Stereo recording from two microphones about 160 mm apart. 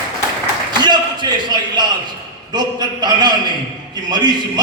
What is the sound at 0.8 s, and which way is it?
A man's voice, 25° right (ahead or behind).